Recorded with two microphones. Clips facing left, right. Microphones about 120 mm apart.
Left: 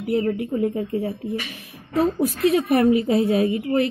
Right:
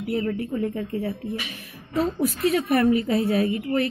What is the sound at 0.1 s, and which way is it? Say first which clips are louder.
A woman's voice: left 4 dB; 35° left (ahead or behind).